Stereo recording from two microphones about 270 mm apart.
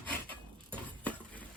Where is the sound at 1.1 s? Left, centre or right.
Centre.